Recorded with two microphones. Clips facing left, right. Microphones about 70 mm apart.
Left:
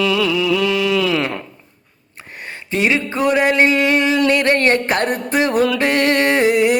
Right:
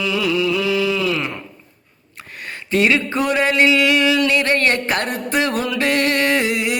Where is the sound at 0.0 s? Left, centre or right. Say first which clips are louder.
Left 2 dB; left.